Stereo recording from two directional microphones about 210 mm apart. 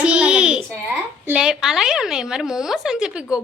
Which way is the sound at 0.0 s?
5° right (ahead or behind).